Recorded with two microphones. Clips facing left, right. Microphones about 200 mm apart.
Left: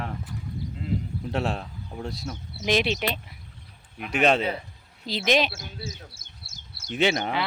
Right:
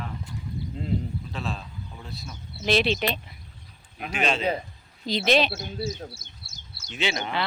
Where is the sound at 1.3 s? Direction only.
70° left (ahead or behind).